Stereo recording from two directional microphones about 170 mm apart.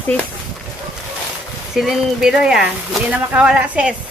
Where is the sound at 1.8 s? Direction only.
5° right (ahead or behind).